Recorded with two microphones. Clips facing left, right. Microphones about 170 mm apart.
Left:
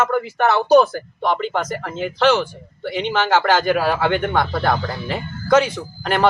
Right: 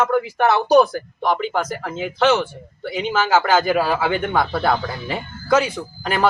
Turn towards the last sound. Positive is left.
turn(degrees=-5)  # may be behind; listen again after turning